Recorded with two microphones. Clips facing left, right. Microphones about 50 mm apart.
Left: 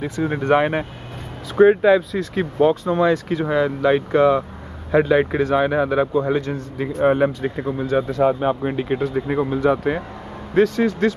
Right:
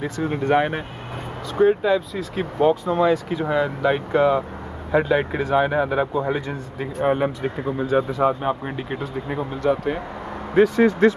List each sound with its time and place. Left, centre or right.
0.5 s speech: centre
1.6 s speech: left
2.1 s speech: centre
7.0 s speech: centre
7.8 s speech: centre
8.4 s speech: centre
10.5 s speech: centre